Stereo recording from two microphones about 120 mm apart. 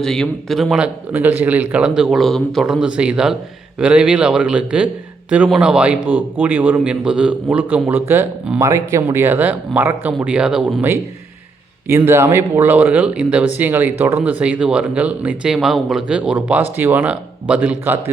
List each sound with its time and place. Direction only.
0.0 s a man's voice: 5° left (ahead or behind)
1.1 s speech: 15° right (ahead or behind)
11.9 s speech: 20° right (ahead or behind)